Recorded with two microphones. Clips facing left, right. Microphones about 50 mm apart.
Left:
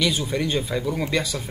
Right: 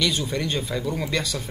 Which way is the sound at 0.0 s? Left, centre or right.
Centre.